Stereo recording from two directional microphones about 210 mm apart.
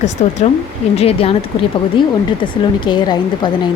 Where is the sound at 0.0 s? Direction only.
35° left (ahead or behind).